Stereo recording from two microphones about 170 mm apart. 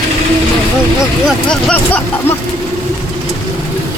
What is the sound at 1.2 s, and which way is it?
Speech, 5° left (ahead or behind).